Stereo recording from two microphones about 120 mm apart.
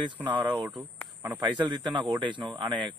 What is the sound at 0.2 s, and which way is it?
Speech, 40° right (ahead or behind).